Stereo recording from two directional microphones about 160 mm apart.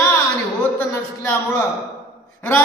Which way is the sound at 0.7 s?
15° left (ahead or behind).